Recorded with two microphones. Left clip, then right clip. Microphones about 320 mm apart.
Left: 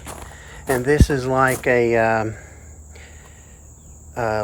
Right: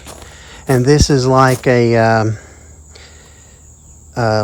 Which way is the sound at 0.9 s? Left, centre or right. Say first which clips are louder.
Right 6 dB; centre.